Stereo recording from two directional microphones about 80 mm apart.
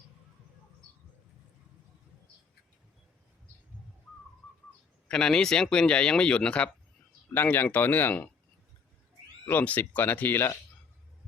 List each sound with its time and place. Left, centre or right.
5.0 s speech: centre
7.3 s speech: left
9.5 s speech: left